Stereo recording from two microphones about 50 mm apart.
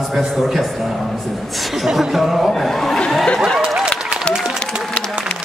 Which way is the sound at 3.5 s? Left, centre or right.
Centre.